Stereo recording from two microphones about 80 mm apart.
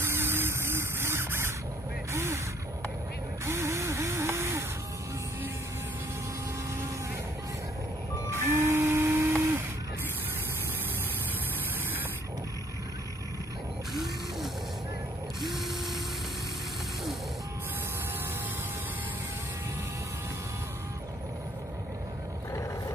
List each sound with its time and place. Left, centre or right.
0.0 s music: right
2.1 s gasp: right
3.4 s spray: right
8.3 s music: right
15.4 s ratchet: centre
22.5 s vehicle: left